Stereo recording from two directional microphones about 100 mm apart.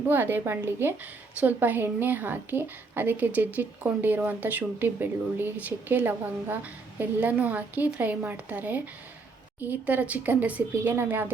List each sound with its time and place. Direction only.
0.1 s a woman's voice: 20° right (ahead or behind)